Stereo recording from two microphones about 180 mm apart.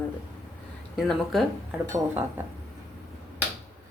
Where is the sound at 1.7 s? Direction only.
15° right (ahead or behind).